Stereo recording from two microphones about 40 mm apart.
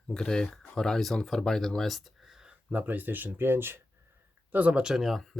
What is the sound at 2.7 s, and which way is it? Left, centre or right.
Speech, right.